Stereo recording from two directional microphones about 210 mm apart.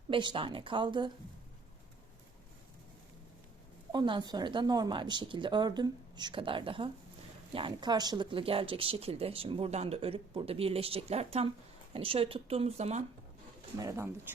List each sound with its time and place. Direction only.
0.1 s speech: 25° right (ahead or behind)
3.9 s speech: 20° right (ahead or behind)
13.7 s speech: 15° right (ahead or behind)